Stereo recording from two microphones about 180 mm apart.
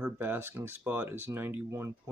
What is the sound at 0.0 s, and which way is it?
Speech, 10° right (ahead or behind).